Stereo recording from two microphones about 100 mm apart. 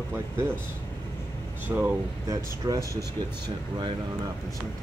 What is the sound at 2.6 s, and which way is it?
Speech, 40° right (ahead or behind).